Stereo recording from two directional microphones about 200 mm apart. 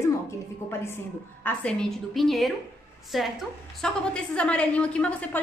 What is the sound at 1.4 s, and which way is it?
A woman's voice, 5° left (ahead or behind).